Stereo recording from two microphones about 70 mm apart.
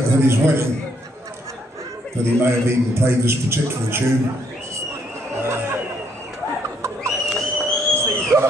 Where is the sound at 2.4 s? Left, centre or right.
Right.